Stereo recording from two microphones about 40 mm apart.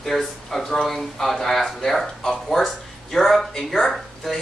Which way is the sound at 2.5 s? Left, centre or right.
Centre.